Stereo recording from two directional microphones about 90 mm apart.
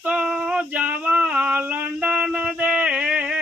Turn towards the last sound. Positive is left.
turn(degrees=-10)  # may be behind; listen again after turning